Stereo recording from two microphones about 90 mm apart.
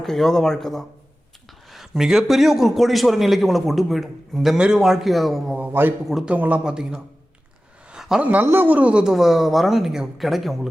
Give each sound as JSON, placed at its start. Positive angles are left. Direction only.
{"t": 0.0, "sound": "a man's voice", "side_deg": 5}
{"t": 5.5, "sound": "a man's voice", "side_deg": -20}
{"t": 7.9, "sound": "a sound", "side_deg": -5}
{"t": 8.2, "sound": "a man's voice", "side_deg": -15}